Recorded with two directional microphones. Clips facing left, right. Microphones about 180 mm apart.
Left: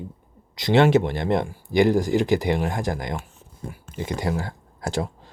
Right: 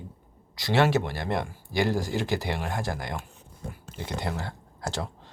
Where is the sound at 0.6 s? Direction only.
20° left (ahead or behind).